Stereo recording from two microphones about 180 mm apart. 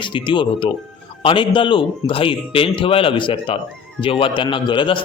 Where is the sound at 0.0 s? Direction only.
25° left (ahead or behind).